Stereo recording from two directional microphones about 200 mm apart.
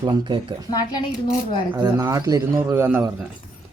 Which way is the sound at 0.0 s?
25° right (ahead or behind).